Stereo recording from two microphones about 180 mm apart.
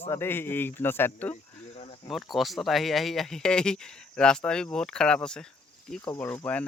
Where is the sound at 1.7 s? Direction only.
35° left (ahead or behind).